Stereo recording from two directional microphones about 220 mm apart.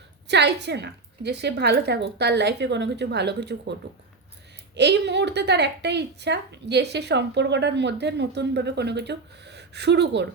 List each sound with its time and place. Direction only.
0.3 s a woman's voice: 50° right (ahead or behind)